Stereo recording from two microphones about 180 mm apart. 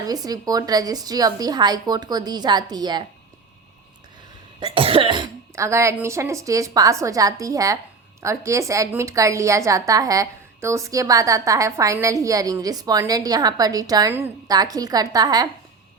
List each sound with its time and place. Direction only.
0.0 s a woman's voice: 20° right (ahead or behind)
4.7 s a woman's voice: 30° right (ahead or behind)